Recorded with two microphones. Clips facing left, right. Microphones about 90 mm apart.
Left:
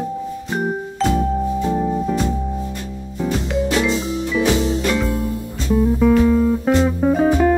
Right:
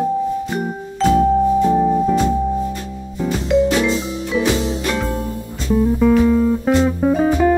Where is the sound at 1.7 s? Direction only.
5° right (ahead or behind).